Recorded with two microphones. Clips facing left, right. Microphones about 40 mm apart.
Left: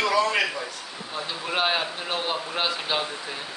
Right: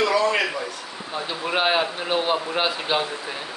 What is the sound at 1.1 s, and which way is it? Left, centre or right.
Speech, centre.